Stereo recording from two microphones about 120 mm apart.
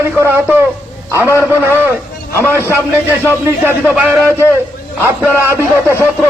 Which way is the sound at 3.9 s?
10° right (ahead or behind).